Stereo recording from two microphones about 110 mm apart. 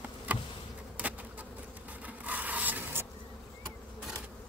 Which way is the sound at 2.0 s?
15° right (ahead or behind).